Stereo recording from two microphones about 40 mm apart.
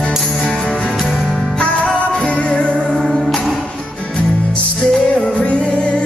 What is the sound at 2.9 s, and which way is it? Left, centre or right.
Music, centre.